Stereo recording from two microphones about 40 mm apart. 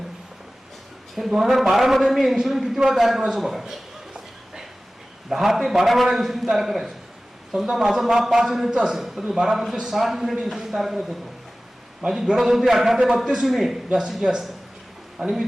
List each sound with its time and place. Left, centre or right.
1.1 s a man's voice: centre
5.3 s a man's voice: centre
12.3 s a man's voice: centre